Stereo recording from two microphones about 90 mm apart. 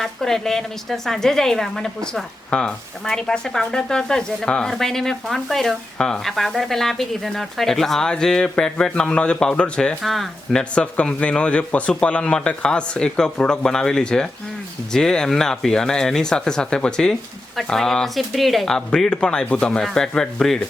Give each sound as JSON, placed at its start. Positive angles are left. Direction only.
{"t": 0.0, "sound": "a woman's voice", "side_deg": 5}